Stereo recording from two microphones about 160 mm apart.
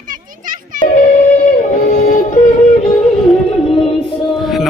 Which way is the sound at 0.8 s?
65° left (ahead or behind).